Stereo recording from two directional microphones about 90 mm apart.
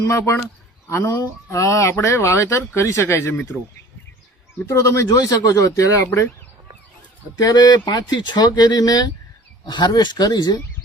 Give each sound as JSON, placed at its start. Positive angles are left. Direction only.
{"t": 0.1, "sound": "speech", "side_deg": 30}
{"t": 4.6, "sound": "speech", "side_deg": 35}
{"t": 7.3, "sound": "speech", "side_deg": 45}